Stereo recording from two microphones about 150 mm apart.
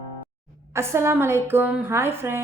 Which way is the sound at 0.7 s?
15° right (ahead or behind).